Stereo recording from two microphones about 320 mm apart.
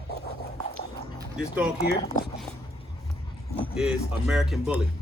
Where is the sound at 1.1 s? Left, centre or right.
Centre.